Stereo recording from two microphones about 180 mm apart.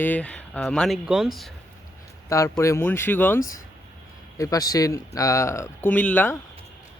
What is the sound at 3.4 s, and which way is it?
Speech, 50° left (ahead or behind).